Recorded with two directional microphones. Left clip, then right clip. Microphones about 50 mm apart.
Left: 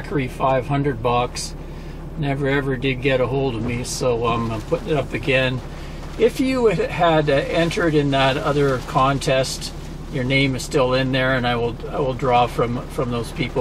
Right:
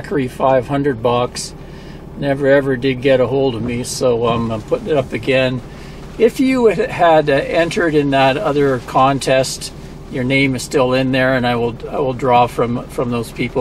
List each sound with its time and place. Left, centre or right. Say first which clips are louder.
0.2 s speech: right 6 dB; centre
9.2 s speech: right 5 dB; right